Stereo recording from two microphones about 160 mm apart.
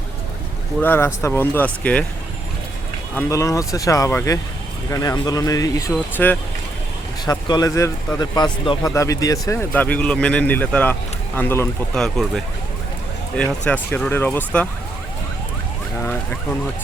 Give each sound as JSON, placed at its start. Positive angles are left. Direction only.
{"t": 0.8, "sound": "speech", "side_deg": 15}
{"t": 3.2, "sound": "speech", "side_deg": 20}
{"t": 7.3, "sound": "speech", "side_deg": 25}
{"t": 11.9, "sound": "speech", "side_deg": 5}